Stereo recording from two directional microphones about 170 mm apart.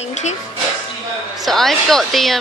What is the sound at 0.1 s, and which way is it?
Music, 45° left (ahead or behind).